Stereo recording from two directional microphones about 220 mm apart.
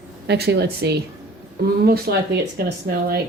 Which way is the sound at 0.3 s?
45° right (ahead or behind).